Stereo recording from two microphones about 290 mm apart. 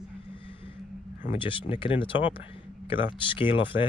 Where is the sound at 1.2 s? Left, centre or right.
Centre.